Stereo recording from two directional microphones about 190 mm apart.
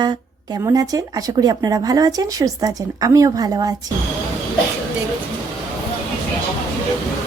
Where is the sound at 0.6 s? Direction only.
20° right (ahead or behind).